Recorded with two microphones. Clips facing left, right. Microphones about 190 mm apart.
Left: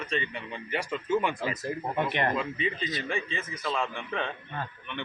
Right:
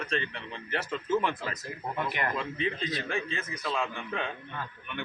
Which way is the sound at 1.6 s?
25° left (ahead or behind).